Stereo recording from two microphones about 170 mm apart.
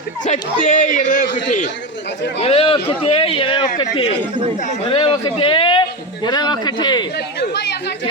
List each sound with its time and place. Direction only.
0.3 s speech: 50° left (ahead or behind)
2.4 s a man's voice: 35° left (ahead or behind)
4.2 s speech: 30° right (ahead or behind)
4.9 s a man's voice: 30° left (ahead or behind)
7.3 s speech: 75° left (ahead or behind)